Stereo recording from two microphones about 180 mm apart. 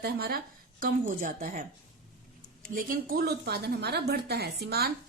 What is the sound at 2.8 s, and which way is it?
A woman's voice, 55° right (ahead or behind).